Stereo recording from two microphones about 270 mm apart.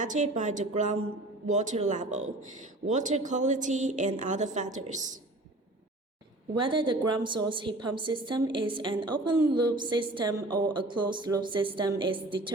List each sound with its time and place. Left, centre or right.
0.0 s a woman's voice: right
6.5 s a woman's voice: centre